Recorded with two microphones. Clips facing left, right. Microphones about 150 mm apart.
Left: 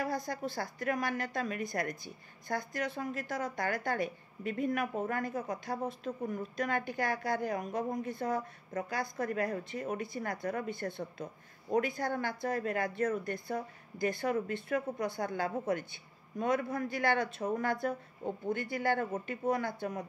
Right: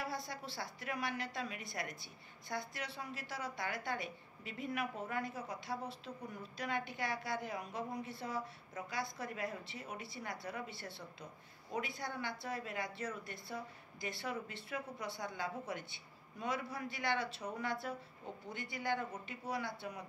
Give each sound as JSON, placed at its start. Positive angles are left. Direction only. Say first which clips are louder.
{"t": 0.0, "sound": "a woman's voice", "louder": "left 8 dB", "side_deg": 45}